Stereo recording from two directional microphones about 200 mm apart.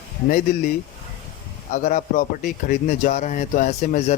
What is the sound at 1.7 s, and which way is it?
Speech, 40° left (ahead or behind).